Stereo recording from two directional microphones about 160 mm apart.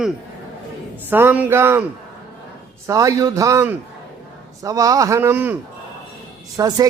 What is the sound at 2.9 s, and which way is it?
A man's voice, 20° right (ahead or behind).